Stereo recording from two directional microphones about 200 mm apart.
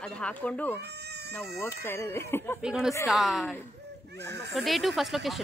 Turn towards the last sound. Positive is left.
turn(degrees=0)  # may be behind; listen again after turning